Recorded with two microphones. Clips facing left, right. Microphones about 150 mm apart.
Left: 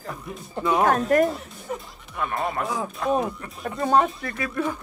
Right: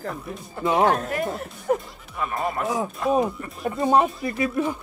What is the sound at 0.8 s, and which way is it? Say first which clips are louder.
Speech: left 3 dB; 45° left (ahead or behind).